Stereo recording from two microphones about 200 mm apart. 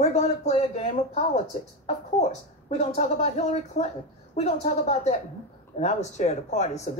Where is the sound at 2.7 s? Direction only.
35° left (ahead or behind).